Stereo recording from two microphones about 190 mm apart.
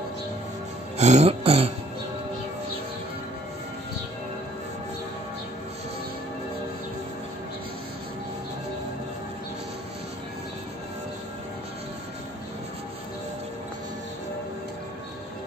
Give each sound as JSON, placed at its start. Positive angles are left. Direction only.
{"t": 0.9, "sound": "music", "side_deg": -35}